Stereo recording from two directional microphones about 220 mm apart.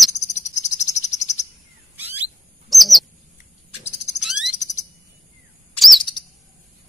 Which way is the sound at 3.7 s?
30° left (ahead or behind).